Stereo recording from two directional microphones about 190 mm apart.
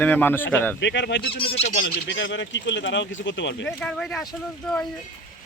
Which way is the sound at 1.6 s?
70° left (ahead or behind).